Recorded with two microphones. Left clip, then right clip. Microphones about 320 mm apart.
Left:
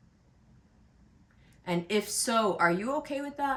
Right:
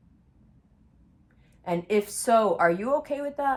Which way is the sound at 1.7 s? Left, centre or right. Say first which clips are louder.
Right 4 dB; centre.